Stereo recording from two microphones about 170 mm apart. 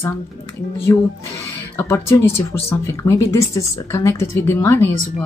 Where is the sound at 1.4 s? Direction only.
15° left (ahead or behind).